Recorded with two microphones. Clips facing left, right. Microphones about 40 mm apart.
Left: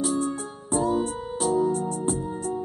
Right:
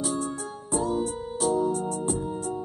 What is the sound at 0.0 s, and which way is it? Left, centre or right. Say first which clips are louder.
Music: left 4 dB; left.